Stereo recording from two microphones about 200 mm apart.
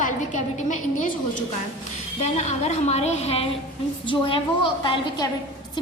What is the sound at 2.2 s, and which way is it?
A woman's voice, 35° left (ahead or behind).